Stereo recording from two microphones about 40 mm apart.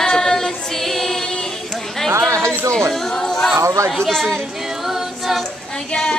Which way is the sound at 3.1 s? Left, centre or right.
Centre.